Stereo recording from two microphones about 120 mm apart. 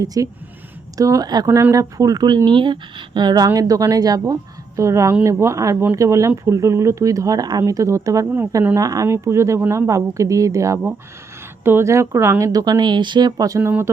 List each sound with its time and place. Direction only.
0.0 s speech: 30° right (ahead or behind)
1.5 s speech: 25° right (ahead or behind)
13.6 s speech: 20° right (ahead or behind)